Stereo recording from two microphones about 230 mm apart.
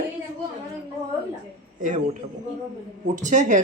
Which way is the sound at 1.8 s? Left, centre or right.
Right.